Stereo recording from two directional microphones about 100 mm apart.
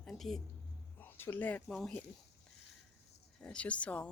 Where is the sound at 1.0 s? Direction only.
20° left (ahead or behind).